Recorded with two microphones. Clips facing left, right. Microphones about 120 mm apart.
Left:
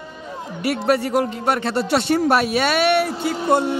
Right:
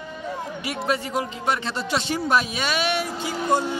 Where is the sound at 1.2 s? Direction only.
55° left (ahead or behind).